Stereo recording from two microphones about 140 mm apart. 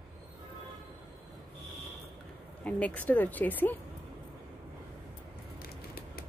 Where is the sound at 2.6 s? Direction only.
10° left (ahead or behind).